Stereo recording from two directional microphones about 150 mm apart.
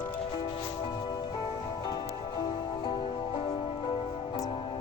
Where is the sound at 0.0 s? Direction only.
35° left (ahead or behind).